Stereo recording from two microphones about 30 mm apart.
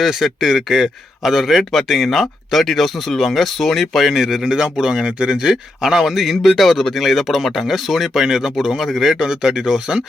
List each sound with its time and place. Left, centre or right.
0.0 s speech: centre
0.4 s speech: centre
4.1 s speech: centre
4.4 s speech: right
5.0 s speech: right
5.4 s speech: centre
9.1 s speech: centre